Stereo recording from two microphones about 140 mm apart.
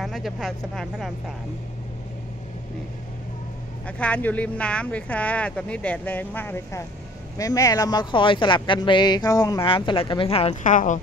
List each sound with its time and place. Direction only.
0.0 s speech: centre (ahead or behind)
3.8 s speech: 10° left (ahead or behind); by 9.7 s 25° left (ahead or behind)
9.7 s speech: 35° left (ahead or behind)
10.6 s speech: 65° left (ahead or behind)